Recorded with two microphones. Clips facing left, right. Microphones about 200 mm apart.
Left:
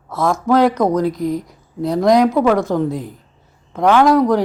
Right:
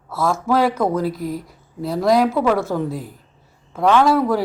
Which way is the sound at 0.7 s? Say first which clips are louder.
Left 4 dB; 20° left (ahead or behind).